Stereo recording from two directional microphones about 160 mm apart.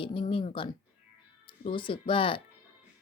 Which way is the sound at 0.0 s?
35° left (ahead or behind).